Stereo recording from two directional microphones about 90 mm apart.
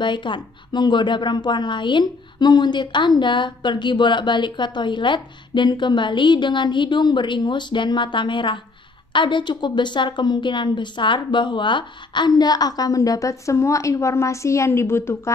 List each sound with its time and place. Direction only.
0.0 s a woman's voice: 60° left (ahead or behind); by 15.3 s 30° left (ahead or behind)